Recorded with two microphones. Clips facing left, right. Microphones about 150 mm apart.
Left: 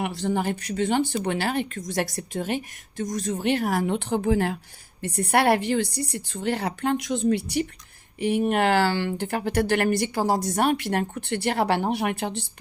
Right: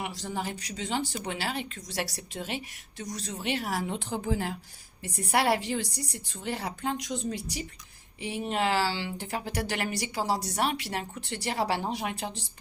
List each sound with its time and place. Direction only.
0.0 s a woman's voice: 60° left (ahead or behind)